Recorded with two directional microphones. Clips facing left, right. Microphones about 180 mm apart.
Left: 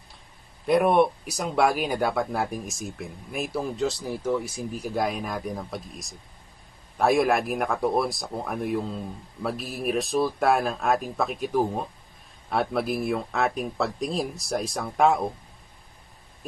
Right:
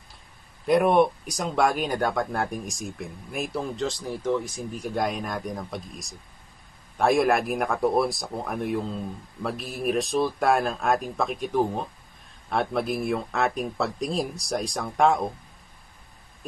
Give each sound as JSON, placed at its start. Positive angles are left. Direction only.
{"t": 0.7, "sound": "speech", "side_deg": 0}